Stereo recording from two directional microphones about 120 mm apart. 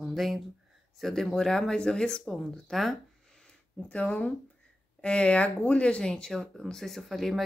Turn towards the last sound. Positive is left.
turn(degrees=0)  # may be behind; listen again after turning